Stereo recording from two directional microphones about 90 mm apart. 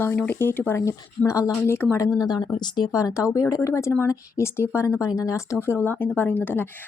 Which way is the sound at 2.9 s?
35° left (ahead or behind).